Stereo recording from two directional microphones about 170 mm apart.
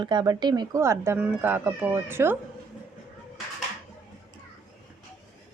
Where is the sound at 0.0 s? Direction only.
25° right (ahead or behind).